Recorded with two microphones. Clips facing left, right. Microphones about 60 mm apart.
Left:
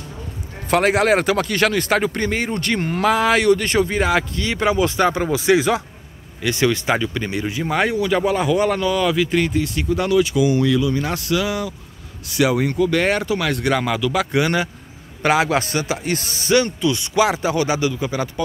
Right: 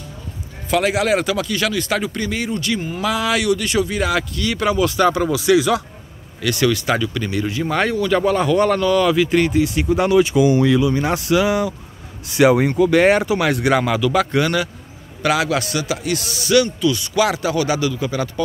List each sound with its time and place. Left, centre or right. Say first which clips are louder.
0.7 s speech: left 1 dB; left
3.1 s speech: left 3 dB; left; by 9.8 s centre
9.8 s speech: right 1 dB; right; by 14.2 s centre
15.2 s speech: left 1 dB; left